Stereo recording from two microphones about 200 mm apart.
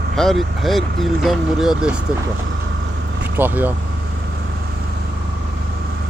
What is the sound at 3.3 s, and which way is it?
Speech, 10° right (ahead or behind).